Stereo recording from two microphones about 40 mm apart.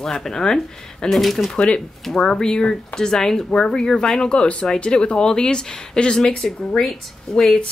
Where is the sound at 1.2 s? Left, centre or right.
Centre.